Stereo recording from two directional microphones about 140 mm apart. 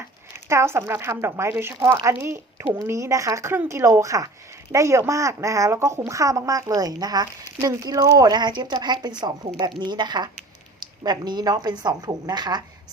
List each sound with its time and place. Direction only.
0.4 s speech: 20° right (ahead or behind)